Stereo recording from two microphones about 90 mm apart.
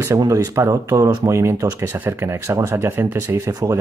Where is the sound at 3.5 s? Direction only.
45° right (ahead or behind).